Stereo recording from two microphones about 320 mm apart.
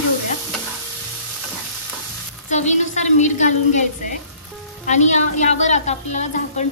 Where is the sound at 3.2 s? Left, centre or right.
Left.